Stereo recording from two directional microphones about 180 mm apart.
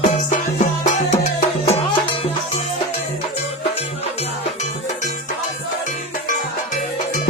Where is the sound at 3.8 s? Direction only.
40° left (ahead or behind).